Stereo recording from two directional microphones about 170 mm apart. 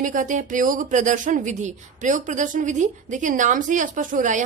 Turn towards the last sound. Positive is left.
turn(degrees=-50)  # may be behind; listen again after turning